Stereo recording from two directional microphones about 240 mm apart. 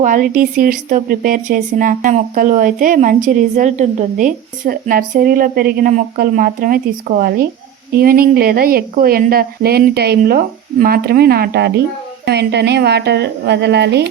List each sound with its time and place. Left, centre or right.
0.0 s a woman's voice: right